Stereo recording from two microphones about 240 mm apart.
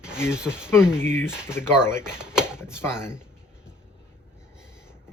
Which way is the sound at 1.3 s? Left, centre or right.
Centre.